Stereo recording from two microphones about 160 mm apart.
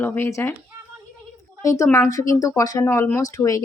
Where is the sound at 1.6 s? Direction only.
20° left (ahead or behind).